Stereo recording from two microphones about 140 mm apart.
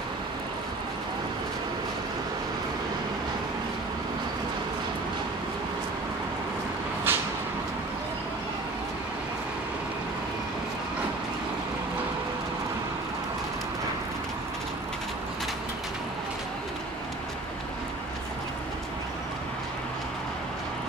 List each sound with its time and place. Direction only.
7.1 s vehicle: 15° right (ahead or behind)